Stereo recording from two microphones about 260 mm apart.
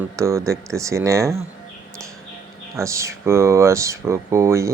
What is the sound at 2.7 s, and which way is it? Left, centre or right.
Speech, centre.